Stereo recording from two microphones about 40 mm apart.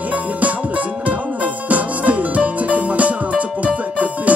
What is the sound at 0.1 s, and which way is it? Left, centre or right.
Music, right.